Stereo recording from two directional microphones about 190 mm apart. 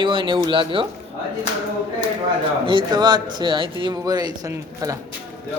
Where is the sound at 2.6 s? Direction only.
25° right (ahead or behind).